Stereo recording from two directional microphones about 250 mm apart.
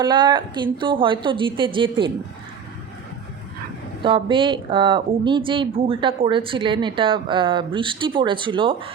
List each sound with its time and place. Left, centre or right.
0.0 s speech: centre
4.0 s speech: centre